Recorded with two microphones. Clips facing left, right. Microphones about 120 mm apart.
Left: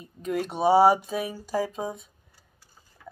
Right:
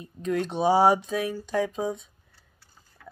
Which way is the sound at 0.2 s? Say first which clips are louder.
Even; 5° left (ahead or behind).